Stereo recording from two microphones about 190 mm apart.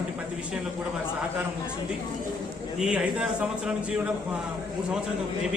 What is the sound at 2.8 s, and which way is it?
Speech, 5° right (ahead or behind).